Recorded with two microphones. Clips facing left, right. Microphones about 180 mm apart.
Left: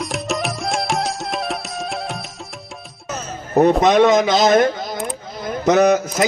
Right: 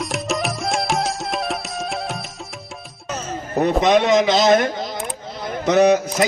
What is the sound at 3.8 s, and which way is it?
A man's voice, 45° left (ahead or behind).